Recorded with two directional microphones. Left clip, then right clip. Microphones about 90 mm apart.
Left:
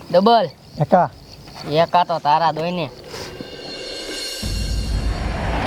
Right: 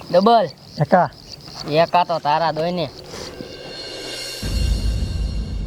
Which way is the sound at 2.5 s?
20° left (ahead or behind).